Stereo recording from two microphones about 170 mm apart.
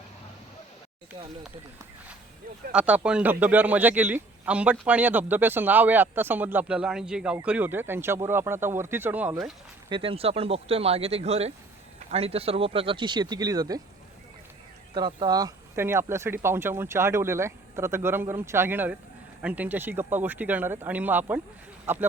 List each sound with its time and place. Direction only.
2.7 s speech: 5° right (ahead or behind)
9.9 s speech: 35° right (ahead or behind)
14.9 s speech: 25° right (ahead or behind)